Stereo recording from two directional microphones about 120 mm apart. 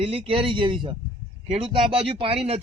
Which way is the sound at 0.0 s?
50° right (ahead or behind).